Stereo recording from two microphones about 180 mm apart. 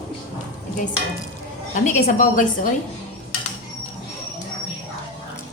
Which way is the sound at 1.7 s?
40° left (ahead or behind).